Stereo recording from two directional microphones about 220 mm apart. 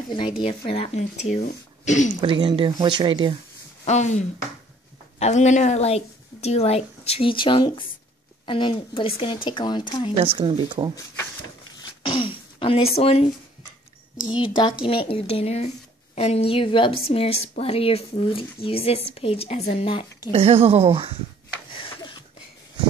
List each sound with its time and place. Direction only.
0.4 s speech: 25° left (ahead or behind)
2.2 s speech: 25° right (ahead or behind)
3.8 s a woman's voice: 30° left (ahead or behind)
10.1 s speech: 25° right (ahead or behind)
11.8 s throat clearing: 25° left (ahead or behind)
14.4 s a woman's voice: 20° left (ahead or behind)
20.3 s speech: 25° right (ahead or behind)
21.7 s a sound: 25° left (ahead or behind)